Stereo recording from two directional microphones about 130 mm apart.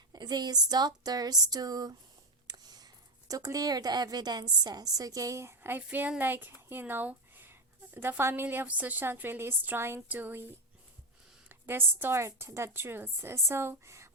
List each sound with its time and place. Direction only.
0.1 s a woman's voice: 30° right (ahead or behind)